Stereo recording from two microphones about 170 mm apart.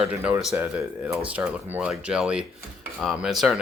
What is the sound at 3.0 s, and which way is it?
Cutlery, centre (ahead or behind).